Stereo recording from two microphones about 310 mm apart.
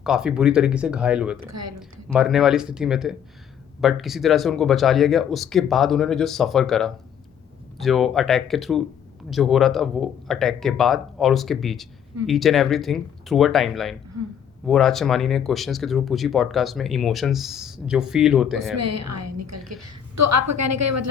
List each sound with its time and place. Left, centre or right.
0.0 s speech: centre
1.4 s a woman's voice: right
2.1 s speech: centre
18.8 s a woman's voice: right